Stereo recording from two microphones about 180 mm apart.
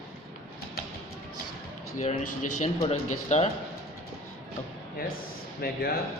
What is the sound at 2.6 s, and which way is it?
Speech, 35° left (ahead or behind).